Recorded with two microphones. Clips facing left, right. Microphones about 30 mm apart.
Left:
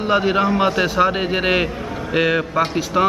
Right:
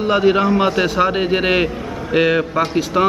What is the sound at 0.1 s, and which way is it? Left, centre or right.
Speech, centre.